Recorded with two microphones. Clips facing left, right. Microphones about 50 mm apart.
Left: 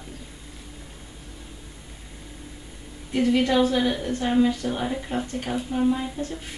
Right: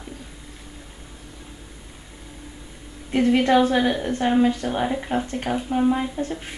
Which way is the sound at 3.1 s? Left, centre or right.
Right.